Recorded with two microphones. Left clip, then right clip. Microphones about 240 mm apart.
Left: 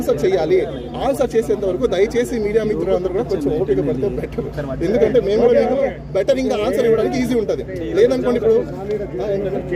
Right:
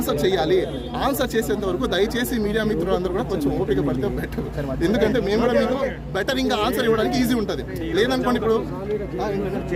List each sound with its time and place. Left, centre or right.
0.1 s a man's voice: right
4.8 s a man's voice: right